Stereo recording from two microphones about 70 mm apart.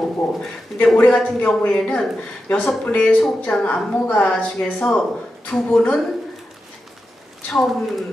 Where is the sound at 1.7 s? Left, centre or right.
Centre.